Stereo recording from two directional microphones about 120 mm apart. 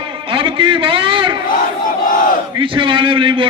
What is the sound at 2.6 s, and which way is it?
Speech, 45° right (ahead or behind).